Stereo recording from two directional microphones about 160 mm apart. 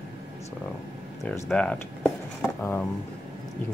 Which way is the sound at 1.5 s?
5° left (ahead or behind).